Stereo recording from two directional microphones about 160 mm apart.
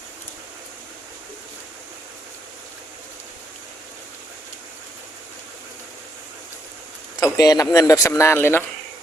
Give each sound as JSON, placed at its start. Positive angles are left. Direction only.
{"t": 7.2, "sound": "speech", "side_deg": 25}